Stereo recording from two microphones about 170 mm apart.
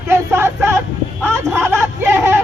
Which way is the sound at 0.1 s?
15° right (ahead or behind).